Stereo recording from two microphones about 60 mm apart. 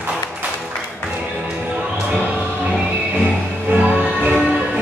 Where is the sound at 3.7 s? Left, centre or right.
Right.